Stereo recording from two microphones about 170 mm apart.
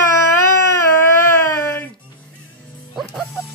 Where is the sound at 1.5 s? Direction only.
15° left (ahead or behind).